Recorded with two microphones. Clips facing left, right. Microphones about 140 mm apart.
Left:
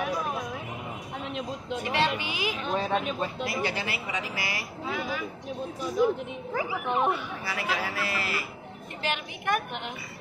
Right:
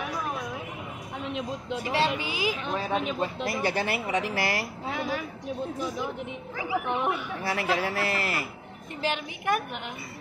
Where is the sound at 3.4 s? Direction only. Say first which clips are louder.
Right 4 dB; 45° right (ahead or behind).